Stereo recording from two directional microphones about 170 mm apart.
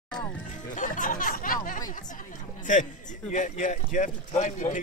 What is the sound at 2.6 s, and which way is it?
A man's voice, 50° left (ahead or behind).